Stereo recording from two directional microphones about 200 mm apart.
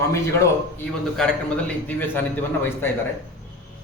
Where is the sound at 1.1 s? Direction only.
5° left (ahead or behind).